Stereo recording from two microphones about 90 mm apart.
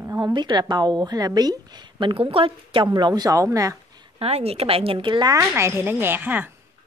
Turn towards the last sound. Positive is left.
turn(degrees=-20)  # may be behind; listen again after turning